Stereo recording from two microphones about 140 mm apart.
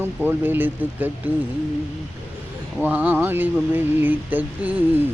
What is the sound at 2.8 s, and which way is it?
Speech, 10° right (ahead or behind).